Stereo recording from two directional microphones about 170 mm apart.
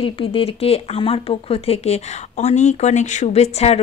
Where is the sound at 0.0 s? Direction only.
35° left (ahead or behind).